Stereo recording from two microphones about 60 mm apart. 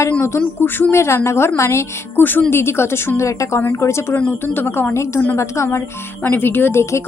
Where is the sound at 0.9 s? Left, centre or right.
Left.